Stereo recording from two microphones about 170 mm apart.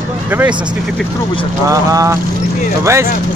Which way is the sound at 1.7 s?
20° right (ahead or behind).